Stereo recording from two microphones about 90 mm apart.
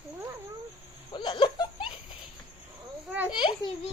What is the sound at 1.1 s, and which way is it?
Laughter, 65° left (ahead or behind).